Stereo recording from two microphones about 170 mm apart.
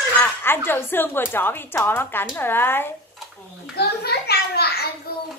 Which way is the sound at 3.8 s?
70° left (ahead or behind).